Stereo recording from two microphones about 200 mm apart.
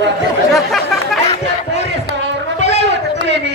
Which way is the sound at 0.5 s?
Centre (ahead or behind).